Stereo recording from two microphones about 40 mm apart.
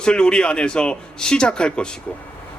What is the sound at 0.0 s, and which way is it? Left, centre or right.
A man's voice, left.